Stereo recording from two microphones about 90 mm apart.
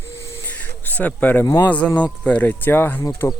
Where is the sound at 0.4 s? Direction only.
20° left (ahead or behind).